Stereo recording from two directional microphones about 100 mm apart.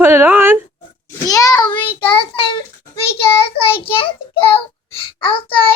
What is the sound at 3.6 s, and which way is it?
A child's voice, 65° left (ahead or behind).